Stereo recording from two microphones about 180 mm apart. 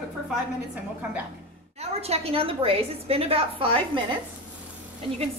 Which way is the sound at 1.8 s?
35° right (ahead or behind).